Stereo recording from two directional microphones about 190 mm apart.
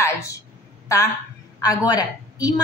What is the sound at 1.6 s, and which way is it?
Speech, 20° left (ahead or behind).